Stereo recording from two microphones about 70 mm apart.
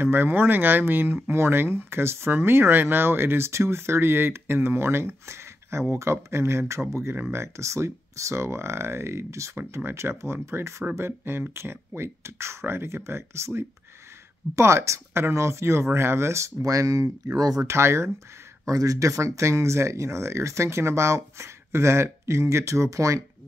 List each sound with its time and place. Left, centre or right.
0.0 s speech: right
17.6 s speech: right
18.7 s speech: right